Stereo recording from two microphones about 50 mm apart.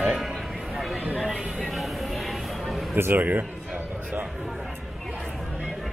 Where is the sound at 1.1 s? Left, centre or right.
Centre.